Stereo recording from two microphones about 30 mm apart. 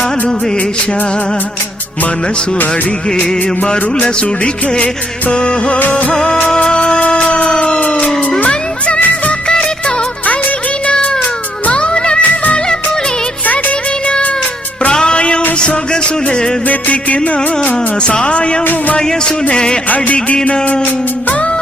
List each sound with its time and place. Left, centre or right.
5.3 s music: left
5.9 s music of bollywood: left
6.7 s music: left
11.7 s music: left
14.8 s music: left
16.6 s music: left
18.0 s music: left
18.6 s music: left
18.9 s music: left
20.1 s music: left